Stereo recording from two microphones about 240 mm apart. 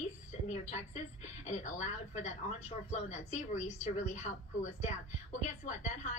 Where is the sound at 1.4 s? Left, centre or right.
Left.